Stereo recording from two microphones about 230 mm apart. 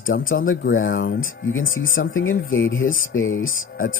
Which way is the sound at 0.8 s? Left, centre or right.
Left.